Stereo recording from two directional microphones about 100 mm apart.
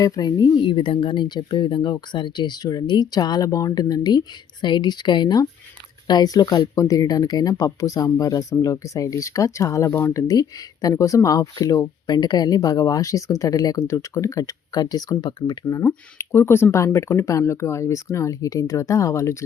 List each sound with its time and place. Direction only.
0.0 s speech: 45° left (ahead or behind)
16.1 s speech: 25° left (ahead or behind)